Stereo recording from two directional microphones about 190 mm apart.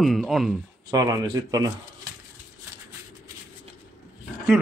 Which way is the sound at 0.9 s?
20° right (ahead or behind).